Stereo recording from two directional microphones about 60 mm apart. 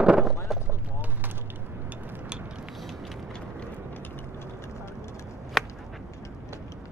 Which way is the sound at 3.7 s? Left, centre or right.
Left.